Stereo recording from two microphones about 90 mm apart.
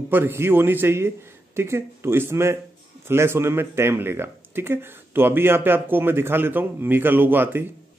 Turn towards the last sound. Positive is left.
turn(degrees=-25)  # may be behind; listen again after turning